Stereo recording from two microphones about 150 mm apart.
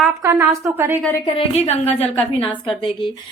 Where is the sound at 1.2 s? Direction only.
45° left (ahead or behind).